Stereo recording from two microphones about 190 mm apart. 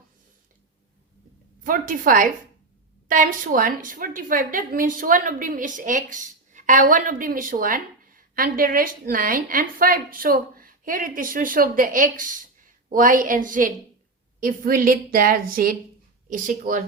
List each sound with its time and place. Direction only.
1.6 s a woman's voice: 45° right (ahead or behind)